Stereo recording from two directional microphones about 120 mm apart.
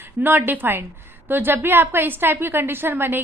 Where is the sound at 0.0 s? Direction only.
15° right (ahead or behind).